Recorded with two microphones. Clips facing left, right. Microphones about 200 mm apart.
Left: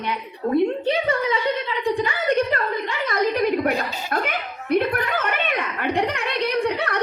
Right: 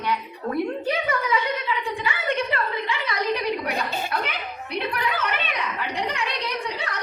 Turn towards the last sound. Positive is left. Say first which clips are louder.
# left 8 dB
turn(degrees=60)  # may be behind; listen again after turning